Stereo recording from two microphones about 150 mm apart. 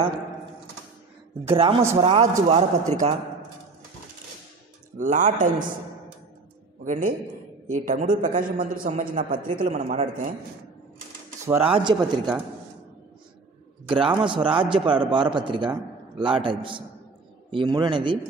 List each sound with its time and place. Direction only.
1.5 s a man's voice: 40° right (ahead or behind)
4.9 s speech: 60° right (ahead or behind)
6.8 s a man's voice: 60° right (ahead or behind)
8.8 s a man's voice: 40° right (ahead or behind)
9.1 s speech: 65° right (ahead or behind)
11.6 s speech: 35° right (ahead or behind)
13.8 s a man's voice: 35° right (ahead or behind)